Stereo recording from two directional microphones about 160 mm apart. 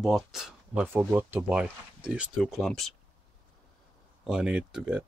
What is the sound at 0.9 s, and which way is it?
Speech, 10° right (ahead or behind).